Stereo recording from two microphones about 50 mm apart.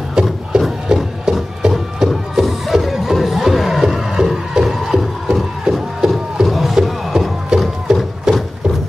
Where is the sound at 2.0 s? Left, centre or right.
Centre.